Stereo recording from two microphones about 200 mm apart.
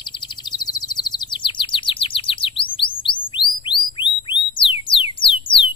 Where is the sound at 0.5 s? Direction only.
20° left (ahead or behind).